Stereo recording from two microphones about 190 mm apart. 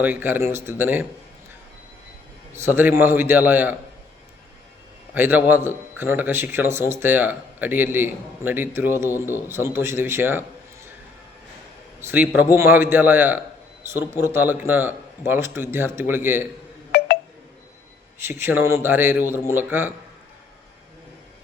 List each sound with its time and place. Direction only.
0.0 s a man's voice: 10° right (ahead or behind)
2.6 s a man's voice: 10° right (ahead or behind)
5.1 s a man's voice: 10° right (ahead or behind)
11.9 s a man's voice: 10° right (ahead or behind)
16.9 s telephone dialing: 55° left (ahead or behind)
18.2 s a man's voice: 10° right (ahead or behind)